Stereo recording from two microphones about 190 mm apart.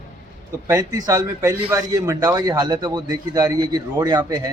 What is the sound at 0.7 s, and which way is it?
A man's voice, 20° right (ahead or behind).